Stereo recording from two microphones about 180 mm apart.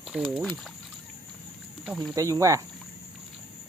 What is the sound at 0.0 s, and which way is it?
Speech, 5° right (ahead or behind).